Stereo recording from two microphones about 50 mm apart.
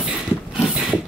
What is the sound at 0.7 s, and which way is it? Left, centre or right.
Mechanisms, right.